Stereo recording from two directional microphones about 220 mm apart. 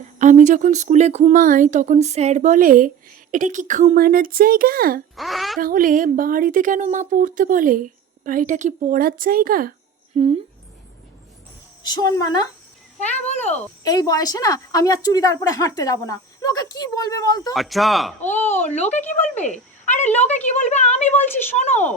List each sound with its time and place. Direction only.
0.2 s speech: 35° right (ahead or behind)
5.1 s a child's voice: centre (ahead or behind)
5.5 s speech: 40° right (ahead or behind)
10.1 s a woman's voice: 30° right (ahead or behind)
11.9 s a woman's voice: 15° left (ahead or behind)
13.2 s speech: 30° left (ahead or behind)
13.8 s a woman's voice: 15° left (ahead or behind)
17.5 s speech: centre (ahead or behind)
18.7 s speech: 30° left (ahead or behind)